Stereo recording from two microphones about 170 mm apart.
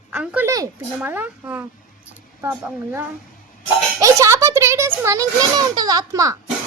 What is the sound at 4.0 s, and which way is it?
A child's voice, 20° right (ahead or behind).